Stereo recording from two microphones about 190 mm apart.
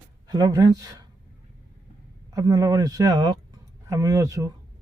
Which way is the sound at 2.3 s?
20° right (ahead or behind).